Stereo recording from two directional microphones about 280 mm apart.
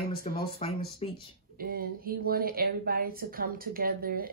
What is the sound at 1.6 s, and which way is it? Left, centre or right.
Speech, right.